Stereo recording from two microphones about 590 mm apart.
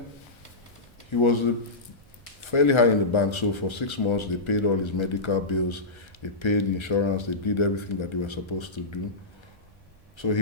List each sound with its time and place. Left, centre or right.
1.1 s speech: left
2.5 s speech: left
10.2 s speech: left